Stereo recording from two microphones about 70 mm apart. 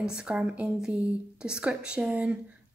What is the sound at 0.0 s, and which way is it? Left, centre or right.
A woman's voice, centre.